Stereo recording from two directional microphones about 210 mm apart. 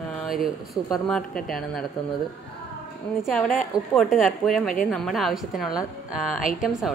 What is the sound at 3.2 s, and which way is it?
Speech, centre (ahead or behind).